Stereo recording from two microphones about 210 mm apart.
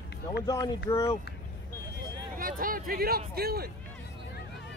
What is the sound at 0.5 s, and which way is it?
Speech, 15° left (ahead or behind).